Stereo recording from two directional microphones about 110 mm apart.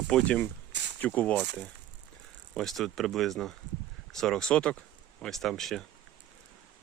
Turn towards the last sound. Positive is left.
turn(degrees=5)  # may be behind; listen again after turning